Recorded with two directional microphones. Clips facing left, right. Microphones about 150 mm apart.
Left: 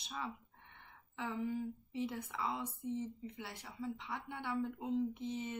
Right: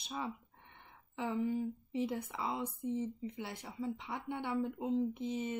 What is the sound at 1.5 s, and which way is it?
Speech, 20° right (ahead or behind).